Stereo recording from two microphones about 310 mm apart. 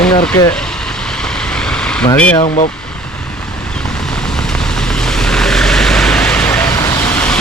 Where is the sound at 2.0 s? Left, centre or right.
Centre.